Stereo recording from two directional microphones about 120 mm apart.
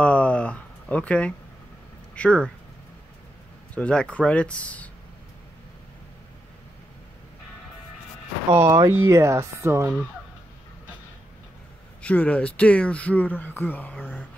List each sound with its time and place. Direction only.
0.0 s a sound: 10° left (ahead or behind)
2.1 s speech: 10° left (ahead or behind)
3.7 s speech: 10° left (ahead or behind)
8.5 s speech: 25° right (ahead or behind)
12.0 s speech: 10° left (ahead or behind)